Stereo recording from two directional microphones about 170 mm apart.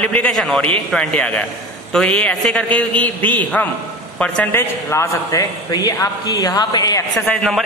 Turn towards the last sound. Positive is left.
turn(degrees=5)  # may be behind; listen again after turning